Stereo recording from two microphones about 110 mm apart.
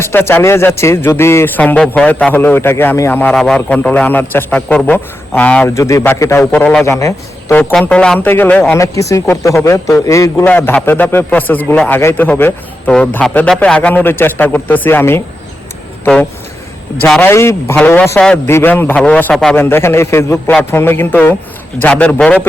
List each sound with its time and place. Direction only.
0.0 s speech: 20° left (ahead or behind)
1.6 s a man's voice: 10° left (ahead or behind)
5.6 s speech: 30° left (ahead or behind)
6.4 s a man's voice: 15° left (ahead or behind)
6.8 s a man's voice: 25° left (ahead or behind)
7.5 s a man's voice: 10° left (ahead or behind)
8.7 s speech: 30° left (ahead or behind)
10.4 s a man's voice: 15° left (ahead or behind)
16.9 s a man's voice: 25° left (ahead or behind); by 19.5 s 5° left (ahead or behind)
19.5 s a man's voice: 20° left (ahead or behind)